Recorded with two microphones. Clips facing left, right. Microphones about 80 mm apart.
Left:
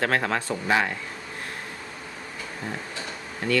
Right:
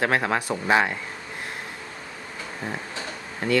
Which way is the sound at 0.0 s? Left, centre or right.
Centre.